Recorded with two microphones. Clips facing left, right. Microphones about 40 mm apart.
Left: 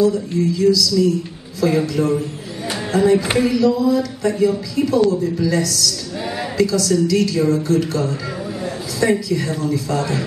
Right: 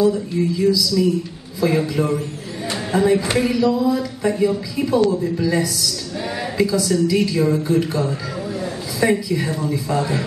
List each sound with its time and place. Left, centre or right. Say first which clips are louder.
0.0 s a man's voice: left 1 dB; centre
2.9 s a sound: left 2 dB; centre
3.3 s speech: left 2 dB; centre